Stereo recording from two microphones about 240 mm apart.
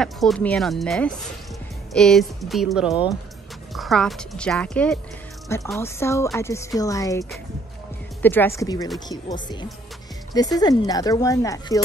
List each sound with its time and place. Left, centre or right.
0.0 s speech: centre